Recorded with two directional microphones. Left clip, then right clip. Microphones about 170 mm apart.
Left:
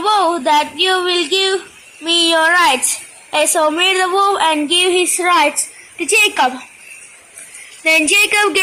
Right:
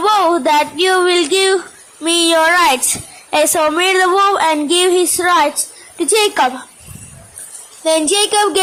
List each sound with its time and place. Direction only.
0.0 s a sound: 30° right (ahead or behind)
2.0 s a child's voice: 30° right (ahead or behind)
5.2 s a woman's voice: 5° right (ahead or behind)
6.0 s a woman's voice: 20° right (ahead or behind)
7.9 s a woman's voice: 10° right (ahead or behind)